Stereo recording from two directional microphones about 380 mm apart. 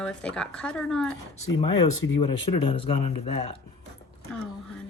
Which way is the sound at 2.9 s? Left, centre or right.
Left.